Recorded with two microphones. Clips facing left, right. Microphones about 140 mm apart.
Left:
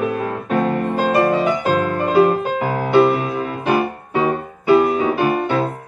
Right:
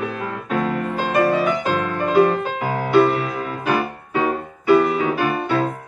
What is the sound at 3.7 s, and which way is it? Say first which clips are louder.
Music: left 3 dB; 30° left (ahead or behind).